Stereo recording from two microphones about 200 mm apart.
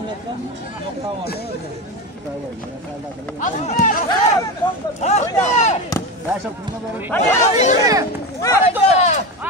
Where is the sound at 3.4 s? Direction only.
35° left (ahead or behind).